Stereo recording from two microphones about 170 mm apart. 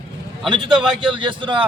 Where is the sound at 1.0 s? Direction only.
30° right (ahead or behind).